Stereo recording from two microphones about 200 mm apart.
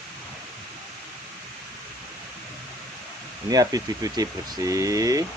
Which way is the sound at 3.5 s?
20° right (ahead or behind).